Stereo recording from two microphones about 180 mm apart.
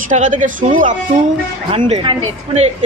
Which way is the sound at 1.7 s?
30° right (ahead or behind).